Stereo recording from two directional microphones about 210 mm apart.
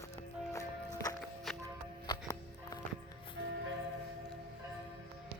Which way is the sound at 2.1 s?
15° left (ahead or behind).